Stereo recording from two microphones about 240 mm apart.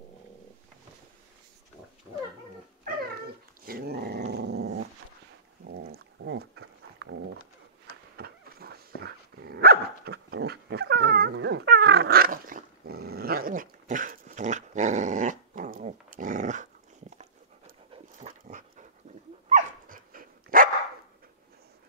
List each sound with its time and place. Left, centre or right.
3.6 s dog: right
4.3 s growling: right
5.7 s dog: right
8.2 s dog: right
17.9 s dog: right